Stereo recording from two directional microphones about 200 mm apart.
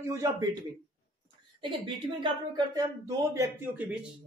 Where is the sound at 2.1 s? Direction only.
25° right (ahead or behind); by 4.1 s 5° right (ahead or behind).